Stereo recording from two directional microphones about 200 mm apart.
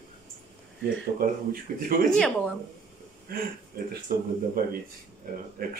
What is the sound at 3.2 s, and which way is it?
Speech, 45° right (ahead or behind).